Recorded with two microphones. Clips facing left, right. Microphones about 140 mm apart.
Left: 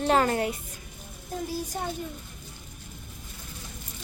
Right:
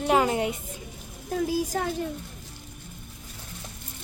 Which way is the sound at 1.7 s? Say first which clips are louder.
Right 4 dB; 90° right.